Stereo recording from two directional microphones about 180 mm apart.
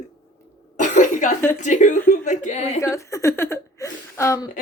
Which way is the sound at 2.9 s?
15° left (ahead or behind).